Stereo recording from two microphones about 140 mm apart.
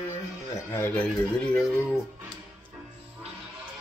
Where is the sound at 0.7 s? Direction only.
15° left (ahead or behind).